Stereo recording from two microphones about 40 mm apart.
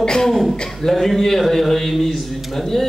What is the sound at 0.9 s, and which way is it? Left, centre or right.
A man's voice, centre.